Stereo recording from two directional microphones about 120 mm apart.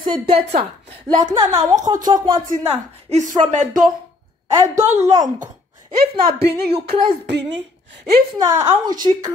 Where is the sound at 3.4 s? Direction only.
80° right.